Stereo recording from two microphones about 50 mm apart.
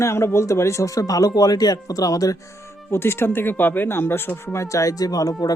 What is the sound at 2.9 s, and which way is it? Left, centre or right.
Speech, left.